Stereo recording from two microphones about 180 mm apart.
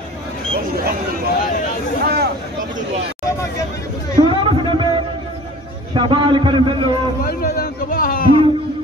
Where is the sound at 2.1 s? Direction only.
60° right (ahead or behind).